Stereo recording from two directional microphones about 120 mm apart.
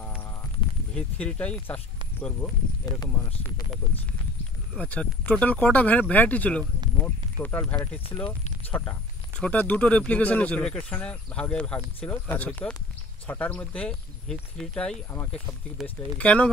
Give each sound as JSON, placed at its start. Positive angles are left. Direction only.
{"t": 0.9, "sound": "speech", "side_deg": 10}
{"t": 2.9, "sound": "speech", "side_deg": 35}
{"t": 4.7, "sound": "speech", "side_deg": 10}
{"t": 8.3, "sound": "a sound", "side_deg": 15}
{"t": 9.4, "sound": "speech", "side_deg": 15}